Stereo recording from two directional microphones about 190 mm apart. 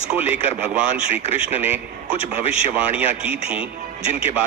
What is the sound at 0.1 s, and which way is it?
A man's voice, 10° right (ahead or behind).